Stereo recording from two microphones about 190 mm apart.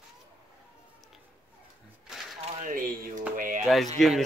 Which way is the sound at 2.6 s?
45° right (ahead or behind).